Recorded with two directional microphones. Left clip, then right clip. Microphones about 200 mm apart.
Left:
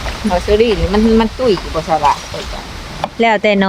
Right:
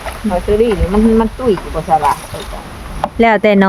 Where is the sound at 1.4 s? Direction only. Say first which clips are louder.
Left 2 dB; 55° left (ahead or behind).